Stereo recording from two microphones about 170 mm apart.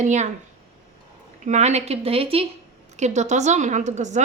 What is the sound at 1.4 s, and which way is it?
A woman's voice, 45° right (ahead or behind).